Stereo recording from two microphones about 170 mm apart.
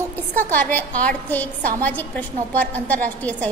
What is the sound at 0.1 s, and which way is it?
A woman's voice, 10° left (ahead or behind).